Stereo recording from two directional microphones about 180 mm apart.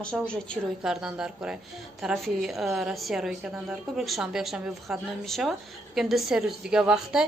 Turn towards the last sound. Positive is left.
turn(degrees=-5)  # may be behind; listen again after turning